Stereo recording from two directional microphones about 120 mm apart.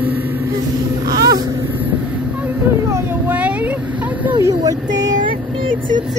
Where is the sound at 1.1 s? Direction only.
30° right (ahead or behind).